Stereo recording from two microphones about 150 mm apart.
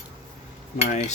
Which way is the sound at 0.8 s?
50° left (ahead or behind).